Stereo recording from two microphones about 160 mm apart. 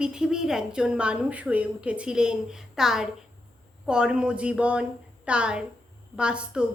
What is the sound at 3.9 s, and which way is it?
Speech, 5° right (ahead or behind).